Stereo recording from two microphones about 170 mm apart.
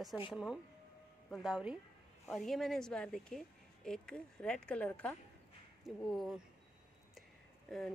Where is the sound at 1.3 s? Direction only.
Centre (ahead or behind).